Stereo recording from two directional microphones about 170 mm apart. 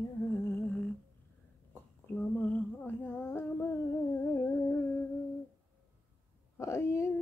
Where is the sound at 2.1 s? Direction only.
10° left (ahead or behind).